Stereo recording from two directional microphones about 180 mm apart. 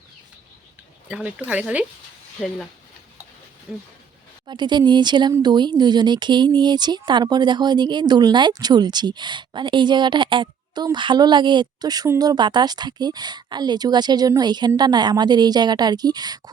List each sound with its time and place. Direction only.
1.0 s speech: 5° right (ahead or behind)
3.7 s speech: 5° right (ahead or behind)
4.4 s speech: 25° right (ahead or behind)